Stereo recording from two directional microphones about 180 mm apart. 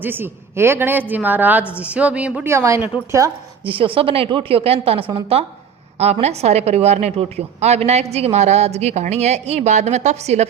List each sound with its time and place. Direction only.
0.0 s a woman's voice: 10° right (ahead or behind)
3.7 s a woman's voice: 30° right (ahead or behind)